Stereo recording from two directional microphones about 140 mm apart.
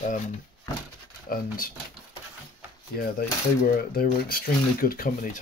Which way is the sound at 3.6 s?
90° left.